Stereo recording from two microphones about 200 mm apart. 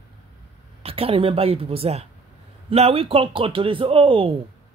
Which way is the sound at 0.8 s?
30° right (ahead or behind).